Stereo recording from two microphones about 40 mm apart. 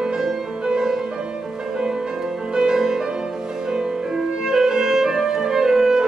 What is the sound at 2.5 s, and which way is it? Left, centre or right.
Music, centre.